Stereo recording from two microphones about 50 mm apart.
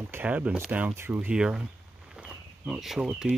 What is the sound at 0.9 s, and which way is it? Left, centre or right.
Speech, right.